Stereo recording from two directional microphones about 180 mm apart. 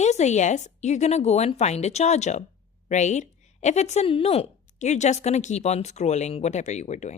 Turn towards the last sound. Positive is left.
turn(degrees=40)  # may be behind; listen again after turning